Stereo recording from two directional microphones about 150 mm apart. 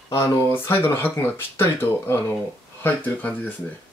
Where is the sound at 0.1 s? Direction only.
15° left (ahead or behind).